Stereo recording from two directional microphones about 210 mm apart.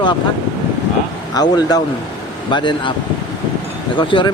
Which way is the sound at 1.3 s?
20° left (ahead or behind).